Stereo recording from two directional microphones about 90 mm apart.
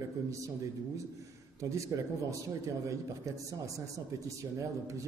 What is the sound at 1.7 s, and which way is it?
Speech, 35° right (ahead or behind).